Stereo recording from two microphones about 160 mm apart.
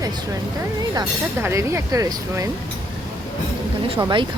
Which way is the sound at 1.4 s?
15° right (ahead or behind).